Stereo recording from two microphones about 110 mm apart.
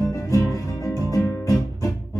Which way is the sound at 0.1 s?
30° left (ahead or behind).